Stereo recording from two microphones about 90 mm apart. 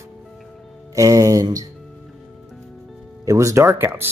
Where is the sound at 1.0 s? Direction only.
40° right (ahead or behind).